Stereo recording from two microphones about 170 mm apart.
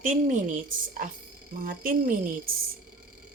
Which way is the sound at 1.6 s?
55° right (ahead or behind).